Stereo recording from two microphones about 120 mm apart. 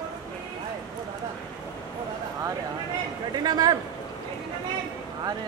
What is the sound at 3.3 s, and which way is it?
Speech, 35° right (ahead or behind).